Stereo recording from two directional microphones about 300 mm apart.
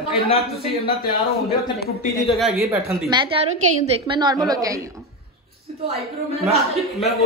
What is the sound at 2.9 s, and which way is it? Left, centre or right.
A woman's voice, centre.